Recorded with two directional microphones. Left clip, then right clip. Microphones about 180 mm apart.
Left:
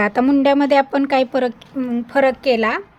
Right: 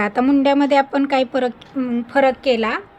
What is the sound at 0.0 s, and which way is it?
A woman's voice, 20° left (ahead or behind).